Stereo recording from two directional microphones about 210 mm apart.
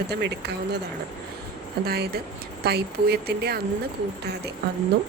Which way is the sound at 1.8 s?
50° right (ahead or behind).